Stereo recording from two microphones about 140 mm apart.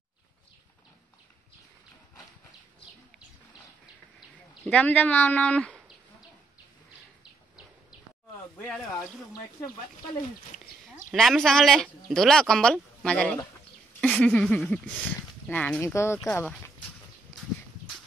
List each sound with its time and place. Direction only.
4.6 s speech: 10° left (ahead or behind)
8.6 s speech: centre (ahead or behind)
11.1 s speech: centre (ahead or behind)